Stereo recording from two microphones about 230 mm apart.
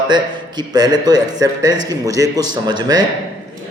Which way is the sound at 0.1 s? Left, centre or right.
Centre.